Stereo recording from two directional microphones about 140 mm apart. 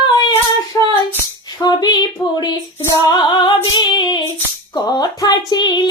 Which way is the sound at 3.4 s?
30° left (ahead or behind).